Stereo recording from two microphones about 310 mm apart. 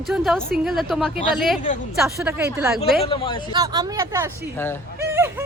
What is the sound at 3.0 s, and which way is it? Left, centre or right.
Speech, centre.